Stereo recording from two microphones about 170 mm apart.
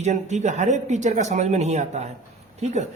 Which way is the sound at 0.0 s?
40° right (ahead or behind).